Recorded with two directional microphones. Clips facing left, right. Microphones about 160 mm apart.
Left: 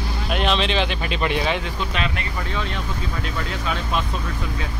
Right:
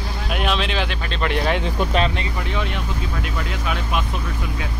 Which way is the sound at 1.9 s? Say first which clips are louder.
Right 6 dB; 35° right (ahead or behind).